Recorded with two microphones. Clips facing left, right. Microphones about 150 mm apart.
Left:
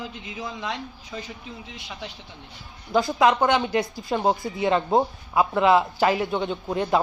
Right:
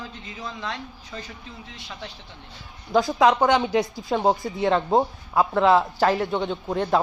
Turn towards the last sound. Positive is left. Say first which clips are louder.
# even
turn(degrees=5)  # may be behind; listen again after turning